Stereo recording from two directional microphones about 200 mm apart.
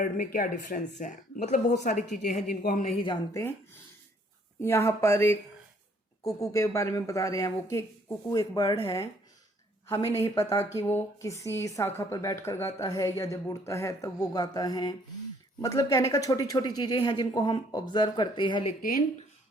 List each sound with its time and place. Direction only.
0.0 s speech: 45° left (ahead or behind)
3.0 s speech: 25° left (ahead or behind)
4.6 s a woman's voice: 15° left (ahead or behind)
18.8 s speech: 45° left (ahead or behind)